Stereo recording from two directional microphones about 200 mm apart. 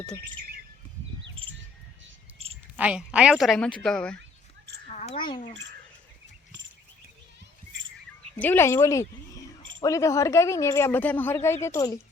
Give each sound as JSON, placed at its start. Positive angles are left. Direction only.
{"t": 2.4, "sound": "cricket", "side_deg": -30}
{"t": 2.7, "sound": "a woman's voice", "side_deg": -5}
{"t": 4.9, "sound": "a sound", "side_deg": 35}
{"t": 8.4, "sound": "speech", "side_deg": 10}